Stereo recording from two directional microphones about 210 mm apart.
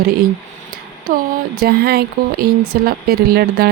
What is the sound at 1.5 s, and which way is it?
Speech, 50° right (ahead or behind).